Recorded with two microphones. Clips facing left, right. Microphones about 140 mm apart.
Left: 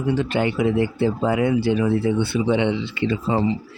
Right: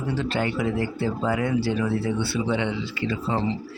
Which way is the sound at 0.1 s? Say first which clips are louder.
Left 5 dB; 15° left (ahead or behind).